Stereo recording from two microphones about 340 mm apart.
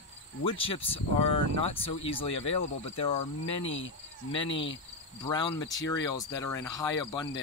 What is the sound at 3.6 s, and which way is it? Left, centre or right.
Cricket, left.